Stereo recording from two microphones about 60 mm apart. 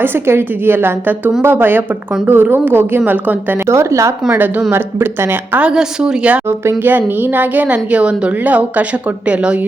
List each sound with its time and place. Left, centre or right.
0.0 s a woman's voice: right
3.7 s speech: right
4.7 s a woman's voice: right
5.5 s a woman's voice: centre
6.8 s a woman's voice: right